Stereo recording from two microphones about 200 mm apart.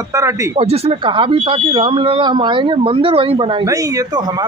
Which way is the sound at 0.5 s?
30° right (ahead or behind).